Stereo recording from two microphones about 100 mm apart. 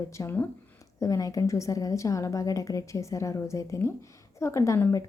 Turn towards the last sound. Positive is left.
turn(degrees=30)  # may be behind; listen again after turning